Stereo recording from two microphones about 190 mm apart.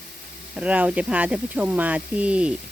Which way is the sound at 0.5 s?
5° right (ahead or behind).